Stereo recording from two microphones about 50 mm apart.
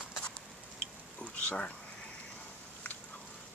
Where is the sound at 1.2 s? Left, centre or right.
Left.